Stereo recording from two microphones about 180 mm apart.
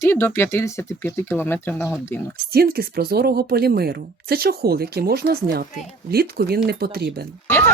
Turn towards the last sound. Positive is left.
turn(degrees=10)  # may be behind; listen again after turning